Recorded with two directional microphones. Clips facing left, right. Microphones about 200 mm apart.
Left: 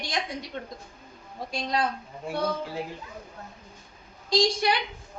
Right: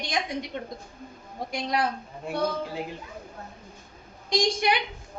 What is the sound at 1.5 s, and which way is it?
Speech, 20° right (ahead or behind).